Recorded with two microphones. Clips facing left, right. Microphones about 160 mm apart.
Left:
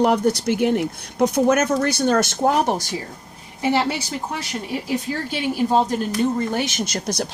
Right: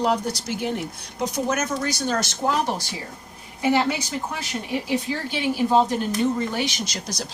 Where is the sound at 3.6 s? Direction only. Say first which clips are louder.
Even; 35° left (ahead or behind).